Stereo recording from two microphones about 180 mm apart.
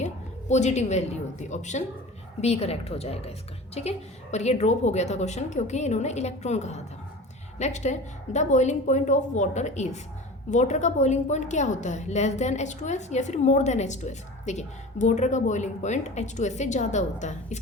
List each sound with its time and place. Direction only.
0.0 s a woman's voice: 40° left (ahead or behind)